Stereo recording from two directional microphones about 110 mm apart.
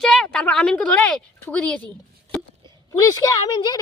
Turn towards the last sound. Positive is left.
turn(degrees=40)  # may be behind; listen again after turning